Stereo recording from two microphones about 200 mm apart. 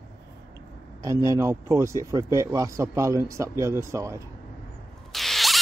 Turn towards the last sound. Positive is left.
turn(degrees=0)  # may be behind; listen again after turning